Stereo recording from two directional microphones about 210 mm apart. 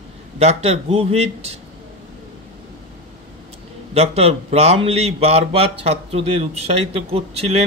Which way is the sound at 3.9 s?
30° right (ahead or behind).